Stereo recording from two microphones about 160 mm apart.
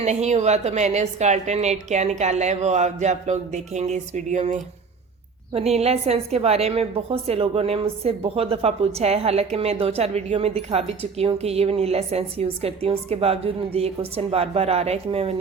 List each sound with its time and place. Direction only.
0.0 s a woman's voice: 45° right (ahead or behind)